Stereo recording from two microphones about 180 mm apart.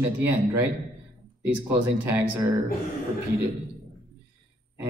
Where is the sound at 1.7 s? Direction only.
10° right (ahead or behind).